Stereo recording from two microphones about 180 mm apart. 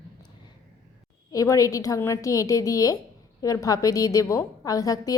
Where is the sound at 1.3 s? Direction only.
20° left (ahead or behind).